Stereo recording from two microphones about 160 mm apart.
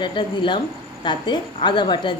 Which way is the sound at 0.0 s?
30° left (ahead or behind).